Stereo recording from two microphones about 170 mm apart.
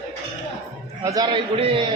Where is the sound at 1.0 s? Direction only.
20° right (ahead or behind).